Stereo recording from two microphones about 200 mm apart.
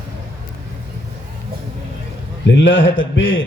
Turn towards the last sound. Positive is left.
turn(degrees=75)  # may be behind; listen again after turning